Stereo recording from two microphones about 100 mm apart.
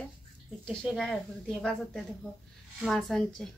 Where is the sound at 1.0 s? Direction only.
5° left (ahead or behind).